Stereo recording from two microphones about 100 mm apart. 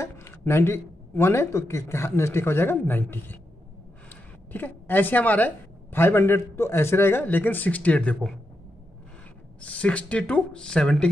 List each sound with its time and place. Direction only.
0.0 s speech: 25° left (ahead or behind)
4.5 s a woman's voice: 20° left (ahead or behind)
9.7 s speech: 10° left (ahead or behind)